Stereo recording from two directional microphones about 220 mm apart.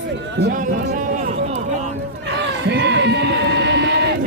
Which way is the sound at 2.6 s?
50° right (ahead or behind).